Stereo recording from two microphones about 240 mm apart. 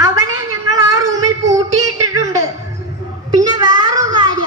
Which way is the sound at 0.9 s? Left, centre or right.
Centre.